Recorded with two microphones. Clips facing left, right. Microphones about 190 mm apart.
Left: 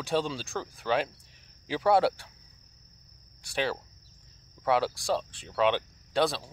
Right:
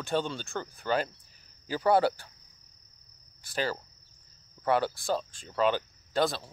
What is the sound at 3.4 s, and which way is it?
Speech, centre (ahead or behind).